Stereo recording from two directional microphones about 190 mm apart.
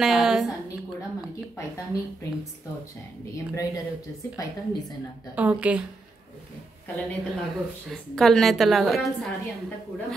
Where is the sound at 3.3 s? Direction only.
15° left (ahead or behind).